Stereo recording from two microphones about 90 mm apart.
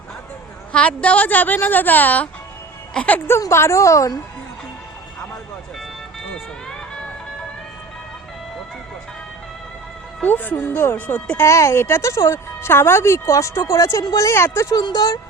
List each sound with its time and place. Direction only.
0.7 s a woman's voice: 15° left (ahead or behind)
3.5 s speech: 30° left (ahead or behind)
10.2 s a woman's voice: 20° left (ahead or behind)
11.4 s speech: 35° left (ahead or behind)
14.8 s speech: 50° left (ahead or behind)